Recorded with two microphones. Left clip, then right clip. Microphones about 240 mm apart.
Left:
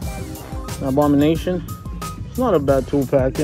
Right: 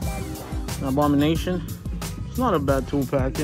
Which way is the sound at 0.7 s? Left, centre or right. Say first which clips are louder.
Left 5 dB; centre.